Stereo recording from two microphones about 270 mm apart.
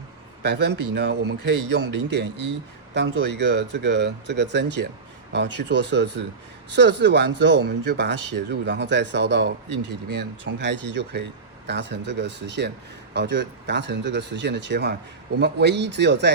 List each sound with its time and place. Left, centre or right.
0.4 s speech: right